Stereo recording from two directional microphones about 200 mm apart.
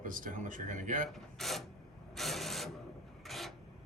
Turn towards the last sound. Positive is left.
turn(degrees=0)  # may be behind; listen again after turning